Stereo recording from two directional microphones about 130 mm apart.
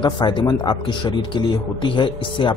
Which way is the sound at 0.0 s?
35° left (ahead or behind).